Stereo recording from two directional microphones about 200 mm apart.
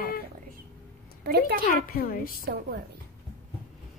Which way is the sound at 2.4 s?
55° right (ahead or behind).